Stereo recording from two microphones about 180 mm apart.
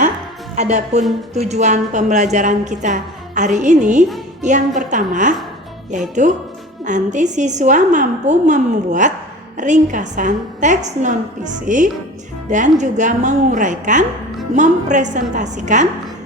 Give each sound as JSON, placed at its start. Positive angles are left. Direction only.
{"t": 0.5, "sound": "a woman's voice", "side_deg": -40}